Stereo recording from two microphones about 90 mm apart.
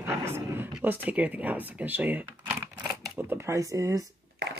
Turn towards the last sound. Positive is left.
turn(degrees=-40)  # may be behind; listen again after turning